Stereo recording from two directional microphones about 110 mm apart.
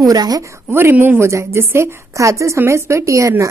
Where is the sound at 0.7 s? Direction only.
20° right (ahead or behind).